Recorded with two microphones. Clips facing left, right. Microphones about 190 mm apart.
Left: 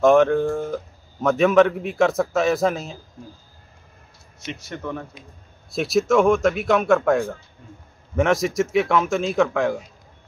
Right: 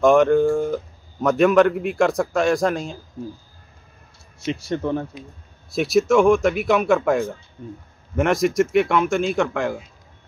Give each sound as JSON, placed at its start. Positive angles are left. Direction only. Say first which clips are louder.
{"t": 0.0, "sound": "a man's voice", "louder": "right 1 dB", "side_deg": 0}
{"t": 4.5, "sound": "speech", "louder": "right 7 dB", "side_deg": -30}
{"t": 5.7, "sound": "a man's voice", "louder": "right 2 dB", "side_deg": 0}